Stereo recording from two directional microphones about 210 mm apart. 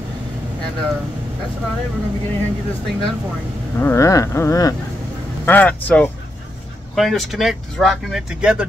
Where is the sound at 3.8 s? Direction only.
15° left (ahead or behind).